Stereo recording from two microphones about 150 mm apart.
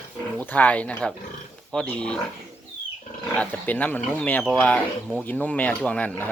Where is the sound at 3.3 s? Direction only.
10° left (ahead or behind).